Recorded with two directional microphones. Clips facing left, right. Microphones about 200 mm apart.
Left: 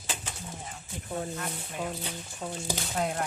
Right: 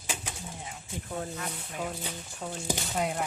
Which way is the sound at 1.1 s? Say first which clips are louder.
Left 2 dB; 5° left (ahead or behind).